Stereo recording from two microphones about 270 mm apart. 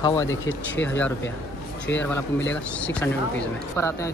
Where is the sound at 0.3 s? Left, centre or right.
Left.